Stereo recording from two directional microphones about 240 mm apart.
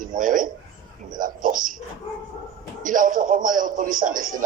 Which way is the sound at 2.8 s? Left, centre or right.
Right.